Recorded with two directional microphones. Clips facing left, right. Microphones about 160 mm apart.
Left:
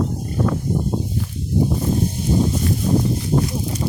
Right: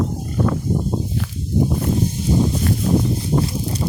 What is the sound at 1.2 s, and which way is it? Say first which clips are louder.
Walk: even; 90° right.